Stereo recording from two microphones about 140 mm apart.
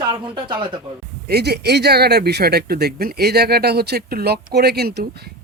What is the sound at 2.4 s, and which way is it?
Speech, 90° right.